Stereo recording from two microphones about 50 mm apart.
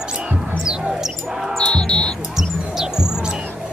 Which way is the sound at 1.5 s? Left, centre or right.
Centre.